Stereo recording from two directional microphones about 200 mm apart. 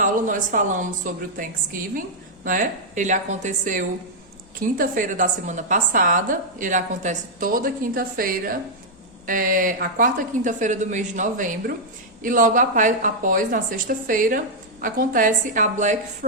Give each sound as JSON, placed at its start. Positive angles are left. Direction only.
{"t": 0.0, "sound": "a woman's voice", "side_deg": -40}